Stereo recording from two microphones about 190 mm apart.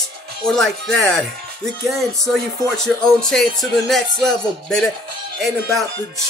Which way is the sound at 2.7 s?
Centre (ahead or behind).